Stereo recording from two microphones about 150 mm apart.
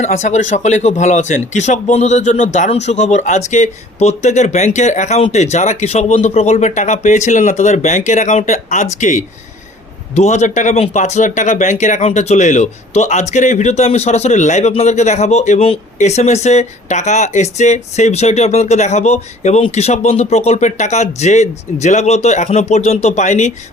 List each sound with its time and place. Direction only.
0.0 s speech: 50° left (ahead or behind)